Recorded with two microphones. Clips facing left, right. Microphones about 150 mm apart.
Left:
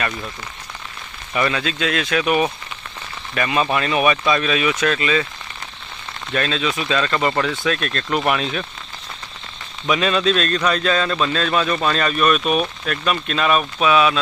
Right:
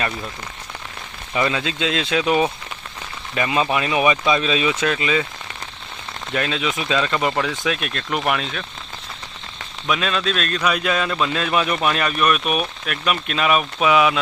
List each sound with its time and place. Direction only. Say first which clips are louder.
1.3 s a man's voice: left 1 dB; 20° right (ahead or behind)
6.3 s a man's voice: left 1 dB; 15° right (ahead or behind); by 8.6 s 5° left (ahead or behind)
9.8 s a man's voice: left 4 dB; centre (ahead or behind); by 14.2 s 15° right (ahead or behind)